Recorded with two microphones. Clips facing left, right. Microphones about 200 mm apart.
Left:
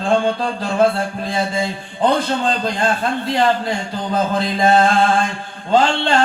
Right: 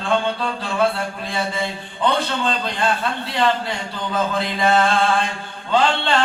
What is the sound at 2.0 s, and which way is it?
Speech, 45° left (ahead or behind).